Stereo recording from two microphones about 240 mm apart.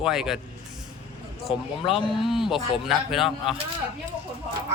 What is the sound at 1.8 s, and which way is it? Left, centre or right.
Speech, left.